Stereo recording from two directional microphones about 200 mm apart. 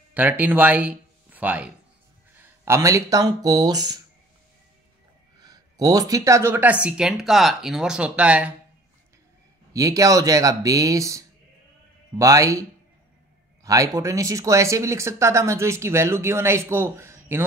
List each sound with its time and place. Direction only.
0.1 s speech: 10° right (ahead or behind)
5.4 s speech: 20° right (ahead or behind)
9.7 s speech: 15° right (ahead or behind)
13.7 s speech: 15° right (ahead or behind)